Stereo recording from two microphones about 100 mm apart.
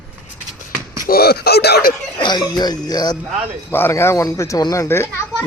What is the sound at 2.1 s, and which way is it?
Speech, 45° left (ahead or behind).